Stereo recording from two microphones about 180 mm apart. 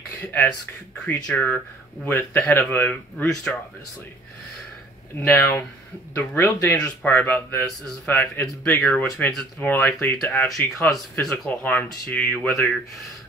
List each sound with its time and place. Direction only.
0.2 s speech: 10° left (ahead or behind)
5.2 s speech: 10° left (ahead or behind)